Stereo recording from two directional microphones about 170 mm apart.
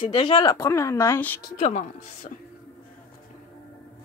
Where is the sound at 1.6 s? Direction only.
45° left (ahead or behind).